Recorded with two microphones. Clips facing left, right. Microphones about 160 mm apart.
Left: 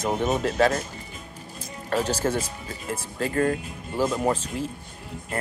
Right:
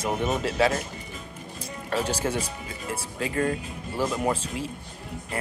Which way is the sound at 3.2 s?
40° left (ahead or behind).